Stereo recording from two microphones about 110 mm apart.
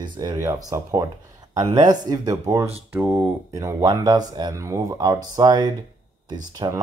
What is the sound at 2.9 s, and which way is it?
Speech, 15° right (ahead or behind).